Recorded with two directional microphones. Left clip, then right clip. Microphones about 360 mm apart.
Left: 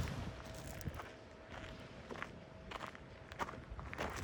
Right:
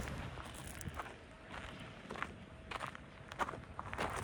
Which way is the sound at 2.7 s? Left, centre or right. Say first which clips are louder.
Right 4 dB; centre.